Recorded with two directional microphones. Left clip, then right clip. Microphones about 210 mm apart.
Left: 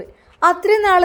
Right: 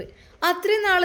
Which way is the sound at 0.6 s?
25° left (ahead or behind).